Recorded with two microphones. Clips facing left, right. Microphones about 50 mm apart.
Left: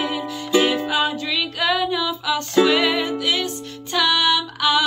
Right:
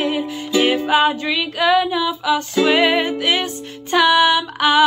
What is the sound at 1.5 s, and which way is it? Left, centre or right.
Music, centre.